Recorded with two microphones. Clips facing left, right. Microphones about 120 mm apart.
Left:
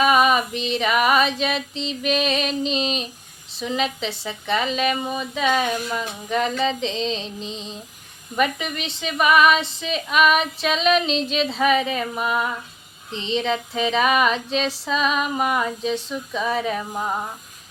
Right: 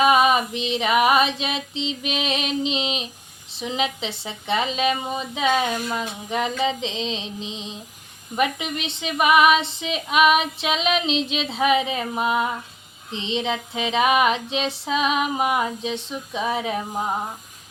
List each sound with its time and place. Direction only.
0.0 s female singing: 20° right (ahead or behind)